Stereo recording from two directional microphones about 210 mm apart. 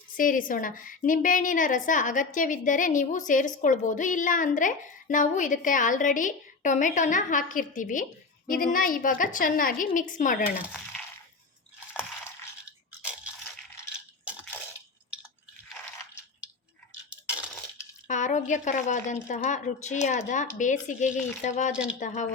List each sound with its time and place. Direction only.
0.2 s a woman's voice: 40° left (ahead or behind)
10.7 s coin: centre (ahead or behind)
18.1 s a woman's voice: 35° left (ahead or behind)
21.7 s speech: 5° right (ahead or behind)
22.0 s a woman's voice: 35° left (ahead or behind)